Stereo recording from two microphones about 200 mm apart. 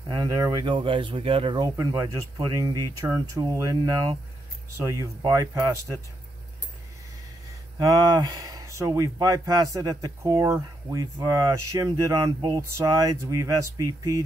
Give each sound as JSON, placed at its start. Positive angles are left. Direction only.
{"t": 0.1, "sound": "speech", "side_deg": -20}
{"t": 7.9, "sound": "speech", "side_deg": -20}